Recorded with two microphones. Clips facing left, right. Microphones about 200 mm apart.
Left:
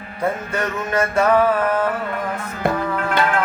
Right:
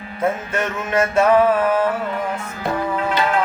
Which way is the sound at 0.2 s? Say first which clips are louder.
Right 1 dB; 5° right (ahead or behind).